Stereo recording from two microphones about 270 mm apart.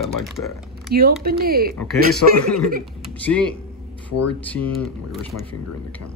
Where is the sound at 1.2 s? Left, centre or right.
Right.